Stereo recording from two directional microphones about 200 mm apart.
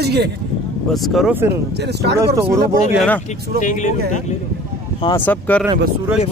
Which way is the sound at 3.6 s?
40° left (ahead or behind).